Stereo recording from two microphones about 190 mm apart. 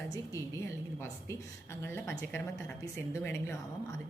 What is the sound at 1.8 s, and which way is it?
A woman's voice, 15° left (ahead or behind).